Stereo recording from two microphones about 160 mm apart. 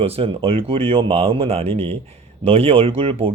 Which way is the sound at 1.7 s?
10° left (ahead or behind).